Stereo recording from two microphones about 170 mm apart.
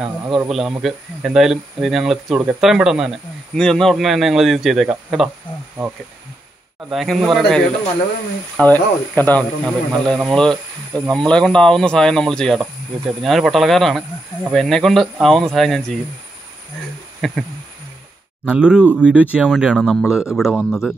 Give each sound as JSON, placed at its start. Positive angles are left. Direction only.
{"t": 0.0, "sound": "speech", "side_deg": -10}
{"t": 6.9, "sound": "speech", "side_deg": 0}
{"t": 17.2, "sound": "speech", "side_deg": 0}
{"t": 18.5, "sound": "speech", "side_deg": -5}